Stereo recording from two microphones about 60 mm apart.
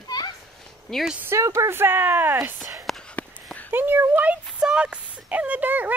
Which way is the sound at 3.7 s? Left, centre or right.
Right.